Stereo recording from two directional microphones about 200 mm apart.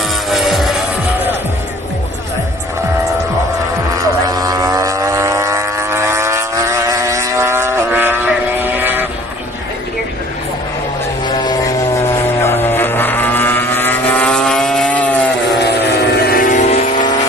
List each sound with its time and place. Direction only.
0.3 s music: centre (ahead or behind)
4.3 s vehicle: 20° right (ahead or behind)
11.3 s vehicle: 20° left (ahead or behind)
15.5 s vehicle: 55° left (ahead or behind); by 17.1 s 35° left (ahead or behind)